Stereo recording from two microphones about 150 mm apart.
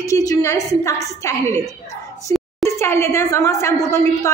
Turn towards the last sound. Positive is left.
turn(degrees=20)  # may be behind; listen again after turning